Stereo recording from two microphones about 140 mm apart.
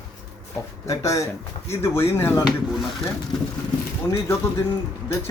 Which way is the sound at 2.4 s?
Centre (ahead or behind).